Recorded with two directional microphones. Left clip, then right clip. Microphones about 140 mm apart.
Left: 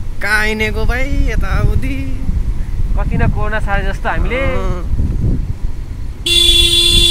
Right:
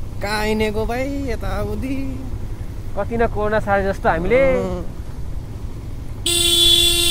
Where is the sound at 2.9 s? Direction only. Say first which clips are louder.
Right 2 dB; 90° right.